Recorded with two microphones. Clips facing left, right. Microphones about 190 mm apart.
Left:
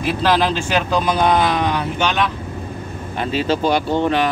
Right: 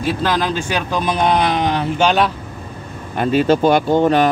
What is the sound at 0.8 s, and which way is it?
Speech, 20° right (ahead or behind).